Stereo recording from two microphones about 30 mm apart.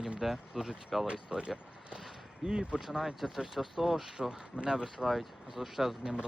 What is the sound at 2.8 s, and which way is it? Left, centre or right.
Speech, centre.